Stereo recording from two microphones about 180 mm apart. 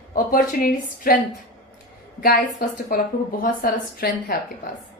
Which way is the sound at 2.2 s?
55° left (ahead or behind).